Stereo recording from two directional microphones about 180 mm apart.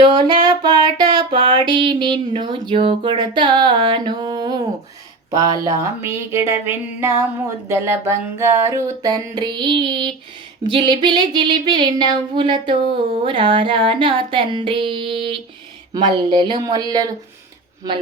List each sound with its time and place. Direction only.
0.1 s music: 25° right (ahead or behind)
5.3 s a sound: 15° right (ahead or behind)
7.7 s music: 15° right (ahead or behind)